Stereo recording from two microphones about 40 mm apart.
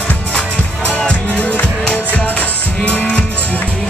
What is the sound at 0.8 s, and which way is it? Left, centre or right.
Music, left.